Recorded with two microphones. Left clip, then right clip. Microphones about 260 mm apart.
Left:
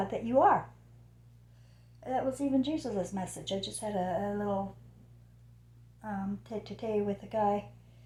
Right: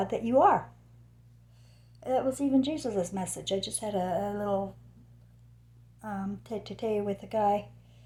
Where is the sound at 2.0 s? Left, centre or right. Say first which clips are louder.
Right 4 dB; right.